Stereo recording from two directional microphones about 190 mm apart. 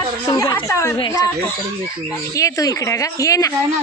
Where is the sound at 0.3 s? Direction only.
20° left (ahead or behind).